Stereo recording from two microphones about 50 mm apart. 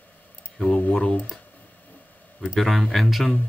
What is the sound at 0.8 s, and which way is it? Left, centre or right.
Speech, left.